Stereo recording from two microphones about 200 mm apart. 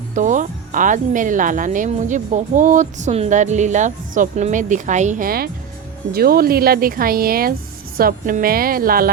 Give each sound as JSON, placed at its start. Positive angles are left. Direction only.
{"t": 0.1, "sound": "speech", "side_deg": -40}